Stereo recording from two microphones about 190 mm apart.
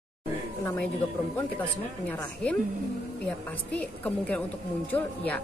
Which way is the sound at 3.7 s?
5° left (ahead or behind).